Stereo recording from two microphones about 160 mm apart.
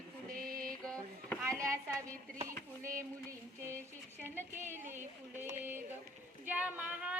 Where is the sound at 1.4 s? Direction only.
20° right (ahead or behind).